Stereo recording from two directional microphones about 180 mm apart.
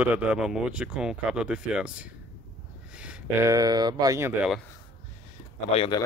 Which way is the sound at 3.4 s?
20° right (ahead or behind).